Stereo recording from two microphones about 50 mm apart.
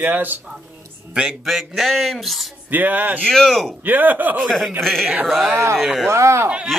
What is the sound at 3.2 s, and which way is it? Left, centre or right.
Speech, centre.